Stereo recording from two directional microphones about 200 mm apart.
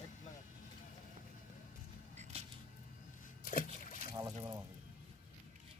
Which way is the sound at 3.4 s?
45° left (ahead or behind).